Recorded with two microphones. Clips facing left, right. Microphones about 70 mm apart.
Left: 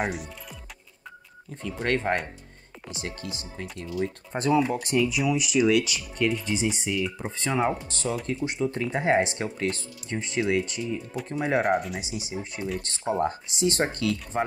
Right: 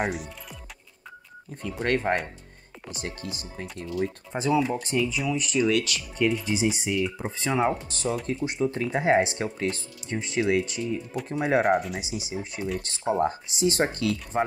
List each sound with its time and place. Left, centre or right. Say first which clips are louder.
0.0 s speech: right 1 dB; centre
1.8 s speech: right 1 dB; centre
6.1 s speech: right 1 dB; centre
10.8 s speech: right 1 dB; centre